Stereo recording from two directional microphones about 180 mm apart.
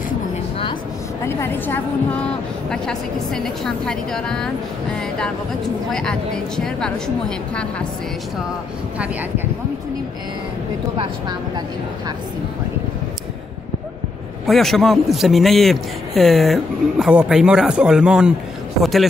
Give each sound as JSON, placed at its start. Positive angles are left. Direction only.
{"t": 1.2, "sound": "a woman's voice", "side_deg": 15}
{"t": 5.9, "sound": "a man's voice", "side_deg": 5}
{"t": 11.0, "sound": "speech", "side_deg": -25}
{"t": 14.4, "sound": "a man's voice", "side_deg": 0}